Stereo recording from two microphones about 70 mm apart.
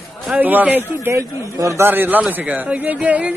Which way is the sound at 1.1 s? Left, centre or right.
Right.